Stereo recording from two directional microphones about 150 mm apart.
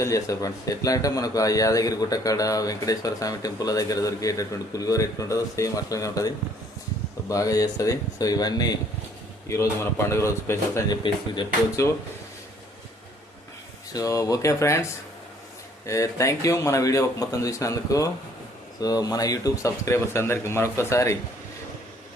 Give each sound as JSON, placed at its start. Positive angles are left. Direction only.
{"t": 0.0, "sound": "a man's voice", "side_deg": 20}
{"t": 13.9, "sound": "a man's voice", "side_deg": 20}
{"t": 15.9, "sound": "a man's voice", "side_deg": 20}